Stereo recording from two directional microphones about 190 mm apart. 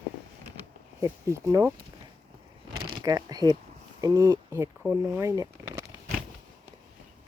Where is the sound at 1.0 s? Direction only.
15° right (ahead or behind).